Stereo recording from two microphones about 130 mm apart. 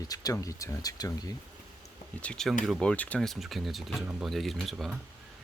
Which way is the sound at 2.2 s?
5° left (ahead or behind).